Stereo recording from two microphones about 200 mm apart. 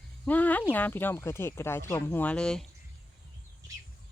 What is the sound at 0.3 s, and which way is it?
Speech, 10° left (ahead or behind).